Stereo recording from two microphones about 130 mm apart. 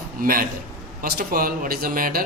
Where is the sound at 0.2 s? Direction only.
90° right.